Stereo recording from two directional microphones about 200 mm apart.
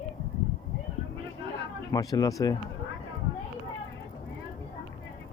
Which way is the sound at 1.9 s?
20° left (ahead or behind).